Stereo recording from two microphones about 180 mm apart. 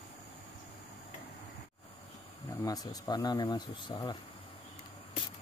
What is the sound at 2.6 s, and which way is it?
Speech, 20° left (ahead or behind).